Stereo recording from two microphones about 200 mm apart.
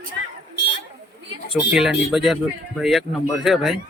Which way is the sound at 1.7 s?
Centre (ahead or behind).